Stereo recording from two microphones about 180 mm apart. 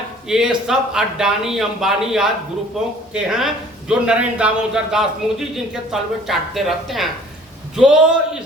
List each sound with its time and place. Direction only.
0.3 s a man's voice: 5° right (ahead or behind)